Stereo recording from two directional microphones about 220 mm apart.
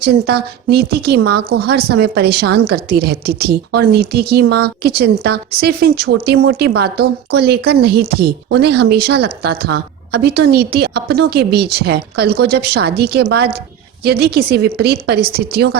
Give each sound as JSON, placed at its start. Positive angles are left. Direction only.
{"t": 0.0, "sound": "a woman's voice", "side_deg": -45}